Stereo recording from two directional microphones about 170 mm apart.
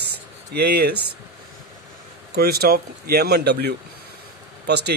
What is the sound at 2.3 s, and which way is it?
Speech, 65° right (ahead or behind).